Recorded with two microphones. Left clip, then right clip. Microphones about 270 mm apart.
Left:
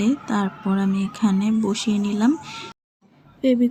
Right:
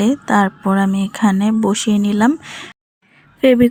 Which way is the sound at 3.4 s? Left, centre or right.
Right.